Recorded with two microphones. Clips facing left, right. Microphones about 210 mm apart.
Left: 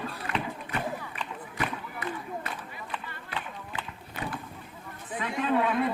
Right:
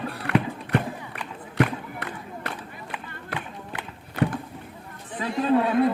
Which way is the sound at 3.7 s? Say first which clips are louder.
Right 13 dB; 70° right (ahead or behind).